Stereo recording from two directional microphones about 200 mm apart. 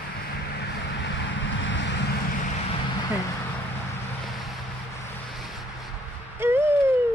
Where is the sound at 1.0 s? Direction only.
65° left (ahead or behind).